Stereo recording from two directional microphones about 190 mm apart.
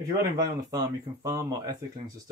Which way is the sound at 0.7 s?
20° right (ahead or behind).